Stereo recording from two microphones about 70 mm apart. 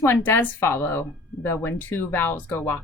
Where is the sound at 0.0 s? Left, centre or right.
Left.